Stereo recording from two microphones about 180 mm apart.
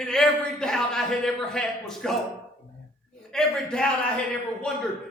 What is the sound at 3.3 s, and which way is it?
Speech, 5° left (ahead or behind).